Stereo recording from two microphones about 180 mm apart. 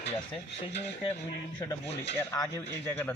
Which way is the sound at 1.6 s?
20° left (ahead or behind).